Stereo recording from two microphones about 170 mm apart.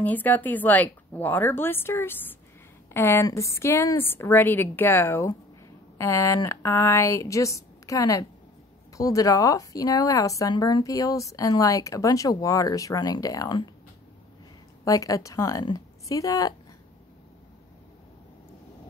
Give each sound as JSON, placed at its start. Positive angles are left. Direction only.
{"t": 0.0, "sound": "a woman's voice", "side_deg": 10}
{"t": 14.9, "sound": "speech", "side_deg": 20}